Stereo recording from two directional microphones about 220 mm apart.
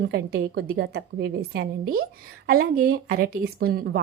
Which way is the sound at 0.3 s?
45° right (ahead or behind).